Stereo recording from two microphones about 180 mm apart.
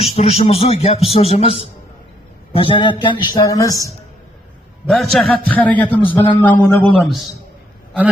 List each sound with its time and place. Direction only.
0.0 s a man's voice: 35° left (ahead or behind); by 3.9 s 20° left (ahead or behind)
4.9 s a man's voice: centre (ahead or behind)
7.0 s a man's voice: centre (ahead or behind)